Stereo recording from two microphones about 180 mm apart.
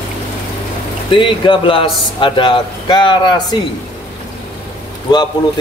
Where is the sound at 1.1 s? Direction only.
25° left (ahead or behind).